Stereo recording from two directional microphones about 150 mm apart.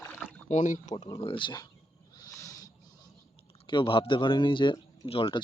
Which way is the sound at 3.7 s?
35° left (ahead or behind).